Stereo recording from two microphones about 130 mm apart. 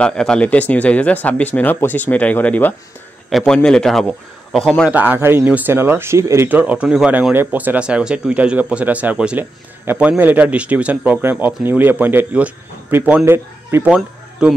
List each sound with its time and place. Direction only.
0.0 s a man's voice: 5° left (ahead or behind)
4.9 s speech: 15° right (ahead or behind)
13.8 s speech: 10° right (ahead or behind)